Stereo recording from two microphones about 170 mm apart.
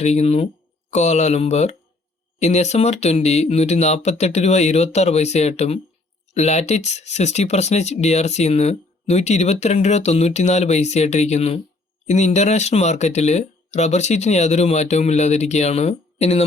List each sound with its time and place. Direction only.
0.0 s speech: 40° left (ahead or behind)